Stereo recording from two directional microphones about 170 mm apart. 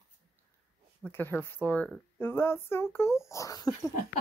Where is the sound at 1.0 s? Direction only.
10° left (ahead or behind).